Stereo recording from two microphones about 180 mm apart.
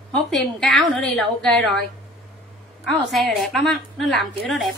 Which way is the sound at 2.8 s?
Centre (ahead or behind).